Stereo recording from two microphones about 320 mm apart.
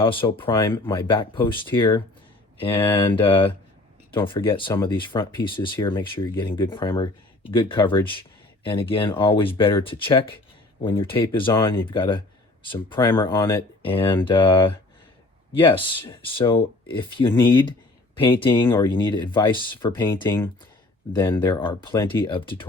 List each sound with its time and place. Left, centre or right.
0.0 s speech: centre